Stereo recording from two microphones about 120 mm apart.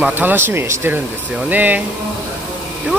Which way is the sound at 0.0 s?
15° right (ahead or behind).